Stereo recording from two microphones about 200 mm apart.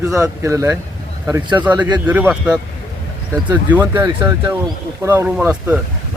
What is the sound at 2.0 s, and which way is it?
Speech, 5° right (ahead or behind).